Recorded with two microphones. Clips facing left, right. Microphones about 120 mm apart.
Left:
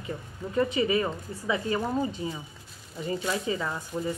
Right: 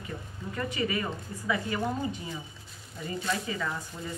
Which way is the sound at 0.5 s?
20° left (ahead or behind).